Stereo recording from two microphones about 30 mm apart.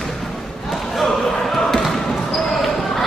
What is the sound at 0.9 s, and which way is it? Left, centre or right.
Basketball bounce, centre.